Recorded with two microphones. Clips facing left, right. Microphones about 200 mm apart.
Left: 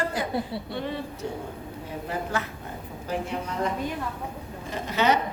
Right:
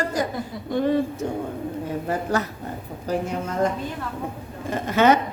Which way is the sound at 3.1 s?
45° right (ahead or behind).